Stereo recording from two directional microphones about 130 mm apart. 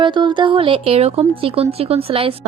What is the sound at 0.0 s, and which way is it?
A woman's voice, 40° right (ahead or behind).